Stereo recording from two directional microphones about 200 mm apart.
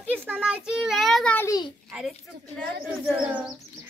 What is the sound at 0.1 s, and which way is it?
A child's voice, 10° right (ahead or behind).